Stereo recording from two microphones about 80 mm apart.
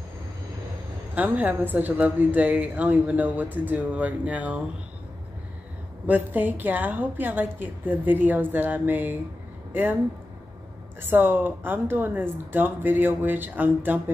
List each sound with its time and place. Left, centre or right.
1.1 s a woman's voice: right
6.0 s a woman's voice: right
11.0 s a woman's voice: right